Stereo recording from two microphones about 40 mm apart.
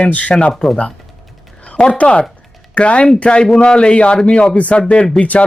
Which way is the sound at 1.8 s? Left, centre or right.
Left.